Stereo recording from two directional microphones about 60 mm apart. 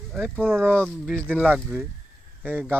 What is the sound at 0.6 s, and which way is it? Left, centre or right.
Speech, left.